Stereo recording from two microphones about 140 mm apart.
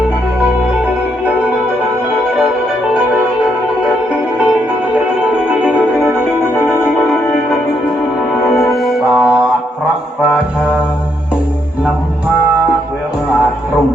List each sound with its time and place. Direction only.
8.7 s music: centre (ahead or behind)